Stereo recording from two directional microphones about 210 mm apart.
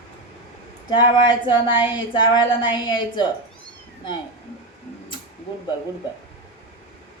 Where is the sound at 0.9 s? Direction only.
20° left (ahead or behind).